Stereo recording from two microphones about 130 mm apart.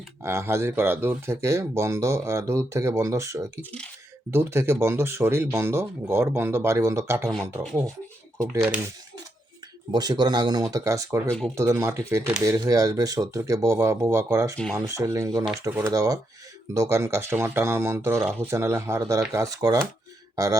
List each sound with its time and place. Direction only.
0.2 s speech: 20° right (ahead or behind)
3.6 s speech: 10° left (ahead or behind)
4.3 s speech: 20° right (ahead or behind)
8.4 s speech: 20° right (ahead or behind)
9.9 s speech: 35° right (ahead or behind)
11.3 s speech: 5° left (ahead or behind)
11.5 s speech: 25° right (ahead or behind)